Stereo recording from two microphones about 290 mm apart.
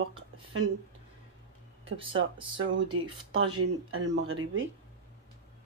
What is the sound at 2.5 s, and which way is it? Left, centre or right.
Speech, right.